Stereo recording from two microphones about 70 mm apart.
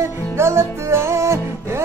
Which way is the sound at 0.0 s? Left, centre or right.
Right.